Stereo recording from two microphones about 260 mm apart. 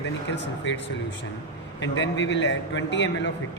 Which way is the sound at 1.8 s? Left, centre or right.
Left.